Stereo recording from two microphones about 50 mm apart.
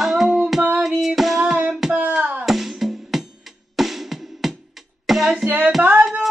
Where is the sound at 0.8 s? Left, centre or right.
Centre.